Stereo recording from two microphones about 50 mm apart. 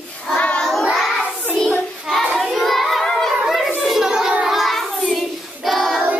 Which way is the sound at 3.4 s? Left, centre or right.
Centre.